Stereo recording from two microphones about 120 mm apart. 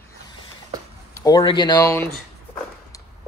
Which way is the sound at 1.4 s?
40° left (ahead or behind).